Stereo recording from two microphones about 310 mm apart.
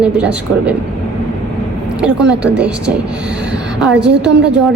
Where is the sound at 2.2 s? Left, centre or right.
Right.